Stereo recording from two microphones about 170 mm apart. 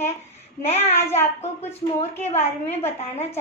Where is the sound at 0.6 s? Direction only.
40° left (ahead or behind).